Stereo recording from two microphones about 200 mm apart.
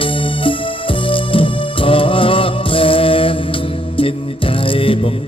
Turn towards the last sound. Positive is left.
turn(degrees=25)  # may be behind; listen again after turning